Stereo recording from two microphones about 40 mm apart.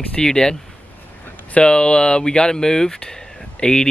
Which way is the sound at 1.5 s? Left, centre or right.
Left.